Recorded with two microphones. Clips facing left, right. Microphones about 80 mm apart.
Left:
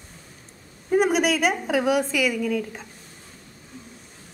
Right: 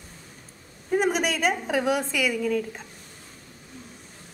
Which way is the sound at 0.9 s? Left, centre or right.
Centre.